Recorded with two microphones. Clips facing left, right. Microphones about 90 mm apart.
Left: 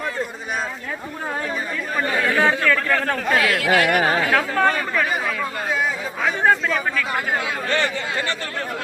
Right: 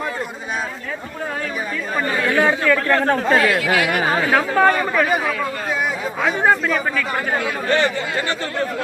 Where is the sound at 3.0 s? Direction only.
30° right (ahead or behind).